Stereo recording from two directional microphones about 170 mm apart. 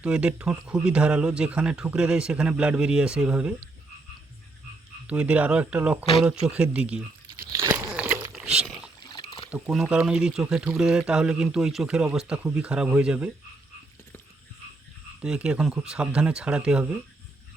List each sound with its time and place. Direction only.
0.0 s speech: 5° right (ahead or behind)
5.0 s speech: 10° right (ahead or behind)
6.2 s crumpling: 5° right (ahead or behind)
7.9 s crunch: 10° right (ahead or behind)
8.3 s a sound: 5° right (ahead or behind)
9.0 s a sound: 25° left (ahead or behind)
9.5 s speech: 5° right (ahead or behind)
15.2 s speech: 5° right (ahead or behind)